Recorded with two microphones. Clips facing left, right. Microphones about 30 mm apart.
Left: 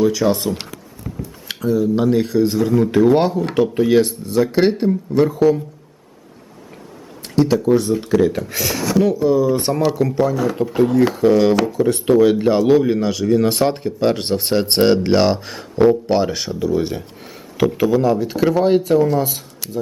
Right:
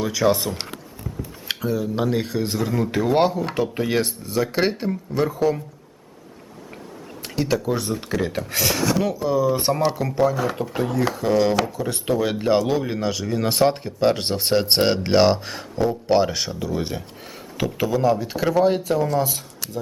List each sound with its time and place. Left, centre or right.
0.0 s speech: centre
1.1 s a sound: left
1.5 s speech: centre
7.5 s speech: centre
8.0 s speech: centre
8.4 s speech: centre